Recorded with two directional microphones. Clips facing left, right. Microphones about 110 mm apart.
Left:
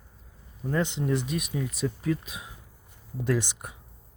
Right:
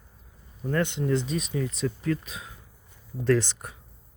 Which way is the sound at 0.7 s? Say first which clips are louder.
Right 1 dB; 15° left (ahead or behind).